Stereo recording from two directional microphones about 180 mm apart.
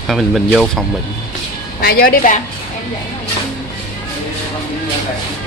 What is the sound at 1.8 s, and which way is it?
Speech, 55° left (ahead or behind).